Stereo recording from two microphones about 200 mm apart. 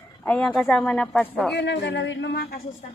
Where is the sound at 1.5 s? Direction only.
60° left (ahead or behind).